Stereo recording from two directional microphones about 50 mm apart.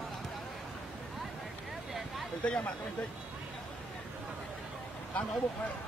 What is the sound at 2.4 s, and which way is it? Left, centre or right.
Speech, left.